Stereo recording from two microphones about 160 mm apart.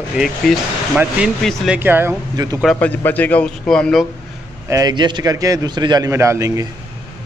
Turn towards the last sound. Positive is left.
turn(degrees=-20)  # may be behind; listen again after turning